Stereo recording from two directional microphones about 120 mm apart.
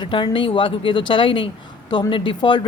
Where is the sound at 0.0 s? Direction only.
45° left (ahead or behind).